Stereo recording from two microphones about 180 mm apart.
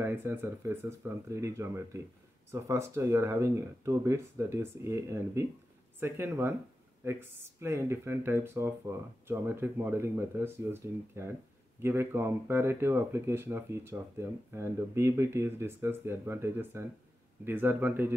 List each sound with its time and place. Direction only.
0.0 s speech: 15° right (ahead or behind)